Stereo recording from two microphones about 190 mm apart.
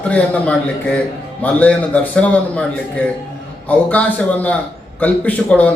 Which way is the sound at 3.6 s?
5° left (ahead or behind).